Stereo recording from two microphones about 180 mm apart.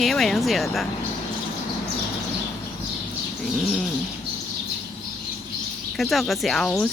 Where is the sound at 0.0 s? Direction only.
Centre (ahead or behind).